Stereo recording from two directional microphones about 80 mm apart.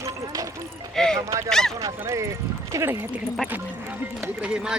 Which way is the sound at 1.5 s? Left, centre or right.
Centre.